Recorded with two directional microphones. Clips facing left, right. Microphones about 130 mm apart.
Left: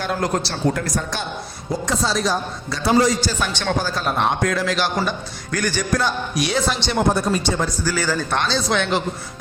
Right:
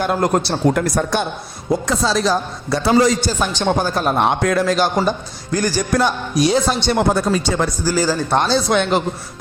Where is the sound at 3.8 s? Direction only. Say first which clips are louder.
Right 3 dB; 50° right (ahead or behind).